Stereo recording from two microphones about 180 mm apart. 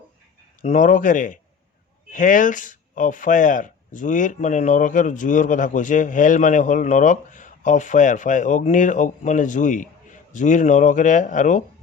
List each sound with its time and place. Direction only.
0.6 s speech: 40° left (ahead or behind)